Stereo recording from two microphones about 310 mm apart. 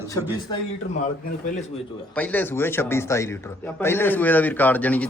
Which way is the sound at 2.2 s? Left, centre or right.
Centre.